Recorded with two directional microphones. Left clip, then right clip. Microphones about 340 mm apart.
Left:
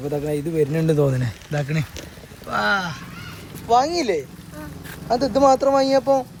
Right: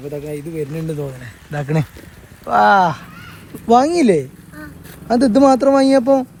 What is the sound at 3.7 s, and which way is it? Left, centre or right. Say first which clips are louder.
Speech: right 5 dB; right.